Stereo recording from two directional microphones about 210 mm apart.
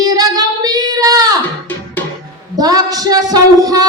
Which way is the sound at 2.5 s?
15° right (ahead or behind).